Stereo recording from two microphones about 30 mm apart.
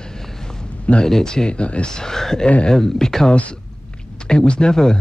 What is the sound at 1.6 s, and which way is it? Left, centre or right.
Speech, left.